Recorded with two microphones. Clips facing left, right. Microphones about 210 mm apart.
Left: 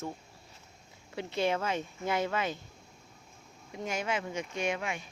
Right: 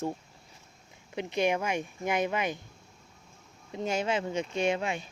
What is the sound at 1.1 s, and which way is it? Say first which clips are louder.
Speech: right 2 dB; 15° right (ahead or behind).